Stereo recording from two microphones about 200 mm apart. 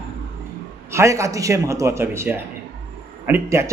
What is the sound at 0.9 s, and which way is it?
Speech, 15° right (ahead or behind).